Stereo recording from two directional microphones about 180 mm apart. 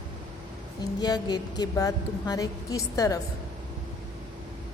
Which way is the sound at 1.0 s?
25° left (ahead or behind).